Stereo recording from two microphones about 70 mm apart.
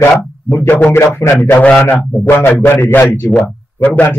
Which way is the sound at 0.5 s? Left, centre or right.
Left.